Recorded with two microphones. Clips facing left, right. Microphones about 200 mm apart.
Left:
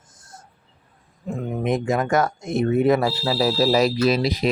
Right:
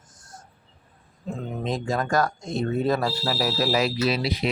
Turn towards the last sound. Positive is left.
turn(degrees=40)  # may be behind; listen again after turning